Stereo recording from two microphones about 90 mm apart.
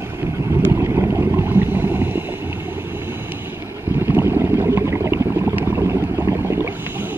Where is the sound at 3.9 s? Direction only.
25° right (ahead or behind).